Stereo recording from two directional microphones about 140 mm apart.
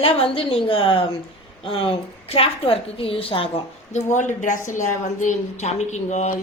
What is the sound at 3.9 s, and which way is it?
A woman's voice, 60° left (ahead or behind).